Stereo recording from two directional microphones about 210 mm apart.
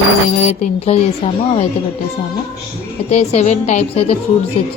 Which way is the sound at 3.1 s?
30° left (ahead or behind).